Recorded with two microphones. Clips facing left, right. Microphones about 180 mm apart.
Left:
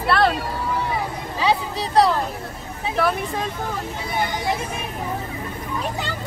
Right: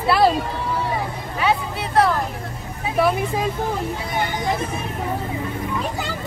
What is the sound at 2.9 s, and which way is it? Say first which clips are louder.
Speech: right 3 dB; 5° right (ahead or behind).